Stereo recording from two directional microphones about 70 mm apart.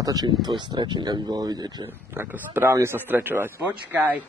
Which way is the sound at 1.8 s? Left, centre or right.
Right.